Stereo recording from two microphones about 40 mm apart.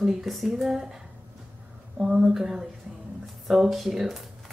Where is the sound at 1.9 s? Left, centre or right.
Centre.